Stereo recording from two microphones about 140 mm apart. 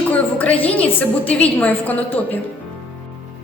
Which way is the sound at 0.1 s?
10° left (ahead or behind).